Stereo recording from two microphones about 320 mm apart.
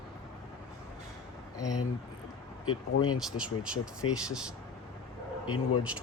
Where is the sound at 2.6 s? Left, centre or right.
Left.